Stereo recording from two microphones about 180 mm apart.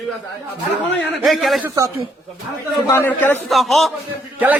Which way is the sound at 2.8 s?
15° left (ahead or behind).